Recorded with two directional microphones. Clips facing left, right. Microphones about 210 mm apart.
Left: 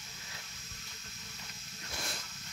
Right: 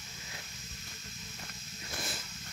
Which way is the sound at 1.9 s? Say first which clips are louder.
Right 2 dB; 5° right (ahead or behind).